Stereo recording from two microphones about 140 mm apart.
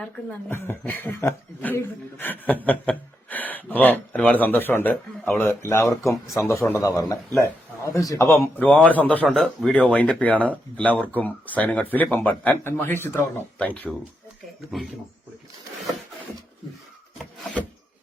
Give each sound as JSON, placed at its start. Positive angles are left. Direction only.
{"t": 0.0, "sound": "a man's voice", "side_deg": 10}